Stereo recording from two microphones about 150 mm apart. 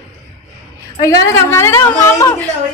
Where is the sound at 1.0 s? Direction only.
20° left (ahead or behind).